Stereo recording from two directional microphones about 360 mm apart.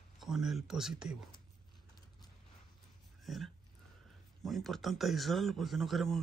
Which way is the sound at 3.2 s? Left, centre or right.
Centre.